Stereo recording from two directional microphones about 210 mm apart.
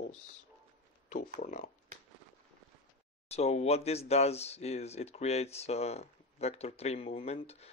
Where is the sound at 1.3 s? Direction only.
35° left (ahead or behind).